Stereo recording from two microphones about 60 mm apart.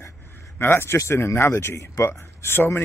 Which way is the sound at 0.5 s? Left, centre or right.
Left.